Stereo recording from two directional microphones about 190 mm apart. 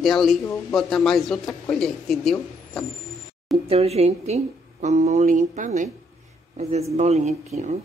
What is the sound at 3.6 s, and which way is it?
Speech, 30° right (ahead or behind).